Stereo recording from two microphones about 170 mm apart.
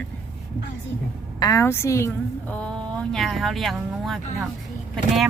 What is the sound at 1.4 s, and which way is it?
A woman's voice, 20° left (ahead or behind).